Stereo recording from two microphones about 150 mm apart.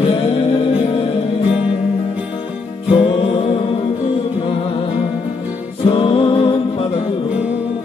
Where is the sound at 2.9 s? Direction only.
35° left (ahead or behind).